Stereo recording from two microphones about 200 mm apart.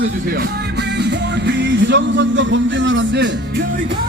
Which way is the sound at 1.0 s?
60° right (ahead or behind).